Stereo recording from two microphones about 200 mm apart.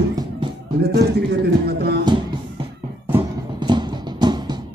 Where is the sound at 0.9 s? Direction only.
55° right (ahead or behind).